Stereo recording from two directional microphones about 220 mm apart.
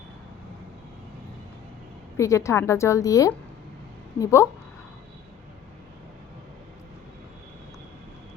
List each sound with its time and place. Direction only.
2.1 s a woman's voice: 15° left (ahead or behind)